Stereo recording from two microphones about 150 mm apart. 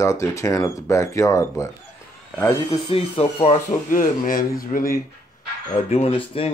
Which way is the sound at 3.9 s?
65° left (ahead or behind).